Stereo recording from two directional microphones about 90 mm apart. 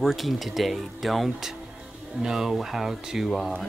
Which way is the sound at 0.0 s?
Centre (ahead or behind).